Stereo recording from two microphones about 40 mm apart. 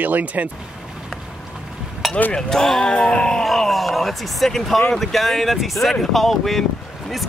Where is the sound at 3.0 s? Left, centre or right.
Left.